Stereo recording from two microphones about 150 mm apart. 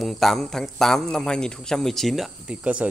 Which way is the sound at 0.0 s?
Centre (ahead or behind).